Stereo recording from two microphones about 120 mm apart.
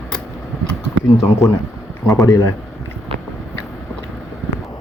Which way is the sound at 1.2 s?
25° left (ahead or behind).